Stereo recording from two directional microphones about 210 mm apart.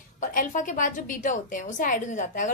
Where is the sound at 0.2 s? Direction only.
40° left (ahead or behind).